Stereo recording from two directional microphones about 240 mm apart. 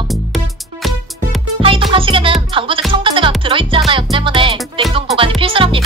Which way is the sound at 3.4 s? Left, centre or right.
Right.